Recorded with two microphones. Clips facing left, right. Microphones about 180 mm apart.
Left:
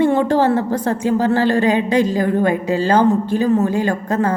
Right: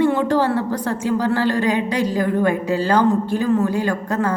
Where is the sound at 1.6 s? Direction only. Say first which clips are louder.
Left 4 dB; 20° left (ahead or behind).